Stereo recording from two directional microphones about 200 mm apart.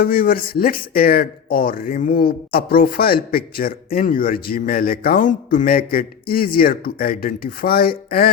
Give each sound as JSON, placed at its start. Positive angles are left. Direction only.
{"t": 0.0, "sound": "speech", "side_deg": 45}